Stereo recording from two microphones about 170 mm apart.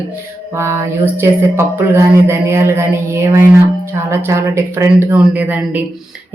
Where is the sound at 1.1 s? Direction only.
15° right (ahead or behind).